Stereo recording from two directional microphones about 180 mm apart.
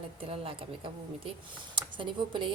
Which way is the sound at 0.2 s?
30° right (ahead or behind).